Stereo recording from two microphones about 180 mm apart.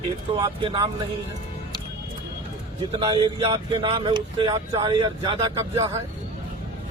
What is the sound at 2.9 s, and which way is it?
Speech, 25° right (ahead or behind).